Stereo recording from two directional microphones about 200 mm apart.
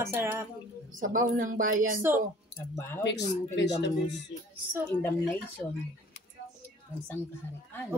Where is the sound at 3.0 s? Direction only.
60° left (ahead or behind).